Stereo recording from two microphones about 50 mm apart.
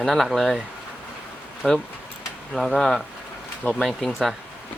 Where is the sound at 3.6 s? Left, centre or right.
Left.